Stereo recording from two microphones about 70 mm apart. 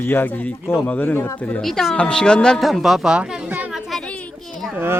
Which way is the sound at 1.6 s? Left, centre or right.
Centre.